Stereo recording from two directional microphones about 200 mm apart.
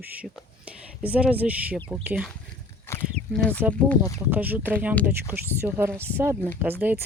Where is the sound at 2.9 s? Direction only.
10° left (ahead or behind).